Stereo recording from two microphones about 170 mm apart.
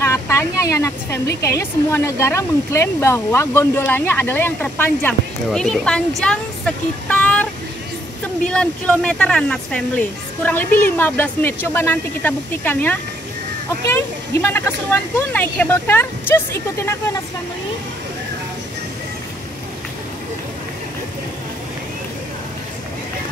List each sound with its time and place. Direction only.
0.0 s speech: 15° left (ahead or behind)
8.5 s speech: 5° left (ahead or behind)